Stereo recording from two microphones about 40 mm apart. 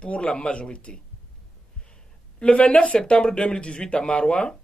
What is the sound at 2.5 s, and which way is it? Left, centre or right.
Speech, left.